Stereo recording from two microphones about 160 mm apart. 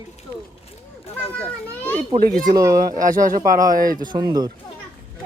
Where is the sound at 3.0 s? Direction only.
55° right (ahead or behind).